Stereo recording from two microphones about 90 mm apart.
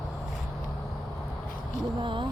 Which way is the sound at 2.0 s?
65° right (ahead or behind).